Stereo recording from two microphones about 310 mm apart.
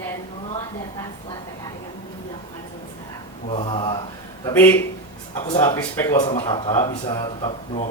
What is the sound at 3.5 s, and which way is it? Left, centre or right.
Speech, centre.